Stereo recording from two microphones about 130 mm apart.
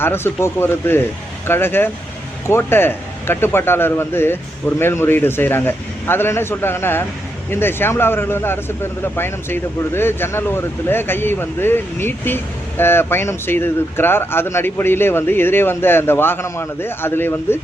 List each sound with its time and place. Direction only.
0.0 s speech: 15° left (ahead or behind)